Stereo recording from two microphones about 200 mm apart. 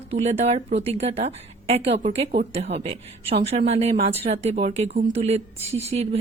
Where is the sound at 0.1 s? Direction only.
30° right (ahead or behind).